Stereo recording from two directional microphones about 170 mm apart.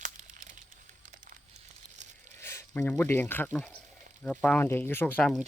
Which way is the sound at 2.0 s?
45° right (ahead or behind).